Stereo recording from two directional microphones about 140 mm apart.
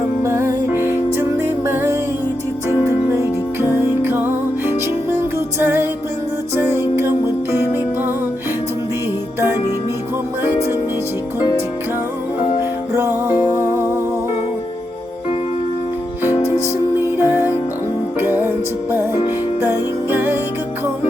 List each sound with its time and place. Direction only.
0.2 s music: 20° right (ahead or behind)
12.9 s music: 15° right (ahead or behind)
17.2 s music: 15° right (ahead or behind)